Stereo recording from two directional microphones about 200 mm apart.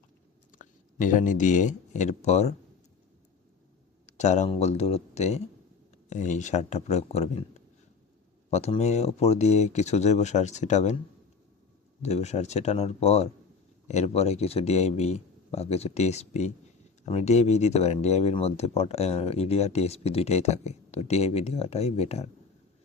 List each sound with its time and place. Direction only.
0.6 s speech: 40° left (ahead or behind)
4.0 s speech: 35° left (ahead or behind)
12.0 s speech: 35° left (ahead or behind)